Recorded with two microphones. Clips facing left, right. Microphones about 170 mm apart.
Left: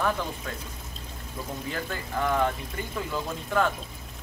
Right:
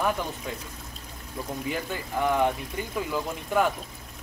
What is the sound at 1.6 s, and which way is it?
Speech, 15° right (ahead or behind).